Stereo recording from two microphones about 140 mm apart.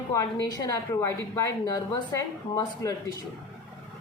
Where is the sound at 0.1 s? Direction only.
25° left (ahead or behind).